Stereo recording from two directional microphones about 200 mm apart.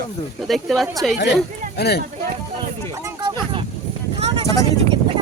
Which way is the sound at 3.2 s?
20° right (ahead or behind).